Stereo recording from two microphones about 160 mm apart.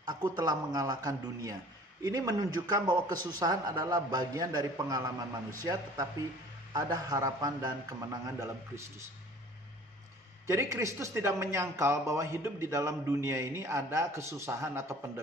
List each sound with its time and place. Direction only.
0.0 s a man's voice: 25° right (ahead or behind)
10.4 s speech: 15° right (ahead or behind)